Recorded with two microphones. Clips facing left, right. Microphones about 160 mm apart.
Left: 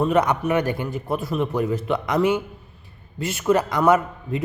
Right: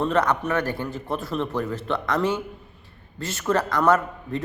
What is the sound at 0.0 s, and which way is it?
A man's voice, 10° left (ahead or behind).